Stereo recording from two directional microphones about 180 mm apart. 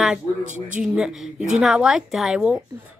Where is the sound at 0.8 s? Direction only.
5° right (ahead or behind).